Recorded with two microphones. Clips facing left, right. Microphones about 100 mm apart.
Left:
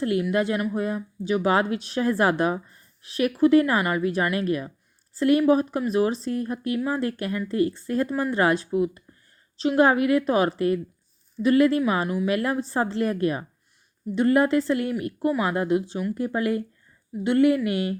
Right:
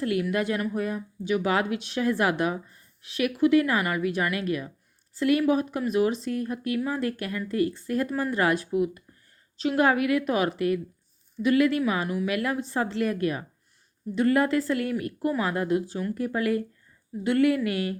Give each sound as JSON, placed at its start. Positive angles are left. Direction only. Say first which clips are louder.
{"t": 0.0, "sound": "a woman's voice", "louder": "left 3 dB", "side_deg": 30}